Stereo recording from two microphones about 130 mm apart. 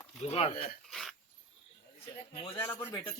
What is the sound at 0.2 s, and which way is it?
Speech, 50° left (ahead or behind).